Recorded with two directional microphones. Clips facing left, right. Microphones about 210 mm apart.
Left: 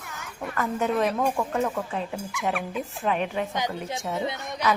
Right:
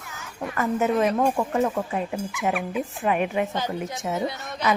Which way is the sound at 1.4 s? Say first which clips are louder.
Right 3 dB; 15° right (ahead or behind).